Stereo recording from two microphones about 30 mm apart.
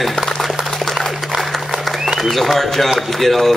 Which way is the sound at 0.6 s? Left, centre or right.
Right.